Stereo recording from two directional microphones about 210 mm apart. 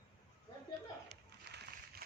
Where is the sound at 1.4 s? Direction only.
50° right (ahead or behind).